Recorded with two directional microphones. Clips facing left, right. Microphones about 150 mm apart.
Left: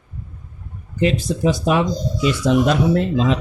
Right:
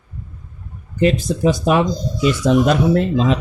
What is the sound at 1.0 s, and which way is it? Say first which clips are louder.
Speech: right 2 dB; 50° right (ahead or behind).